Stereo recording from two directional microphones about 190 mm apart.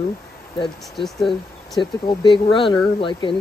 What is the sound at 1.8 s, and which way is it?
Speech, 25° left (ahead or behind).